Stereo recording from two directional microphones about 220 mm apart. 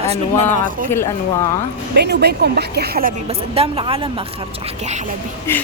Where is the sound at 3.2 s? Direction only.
25° right (ahead or behind).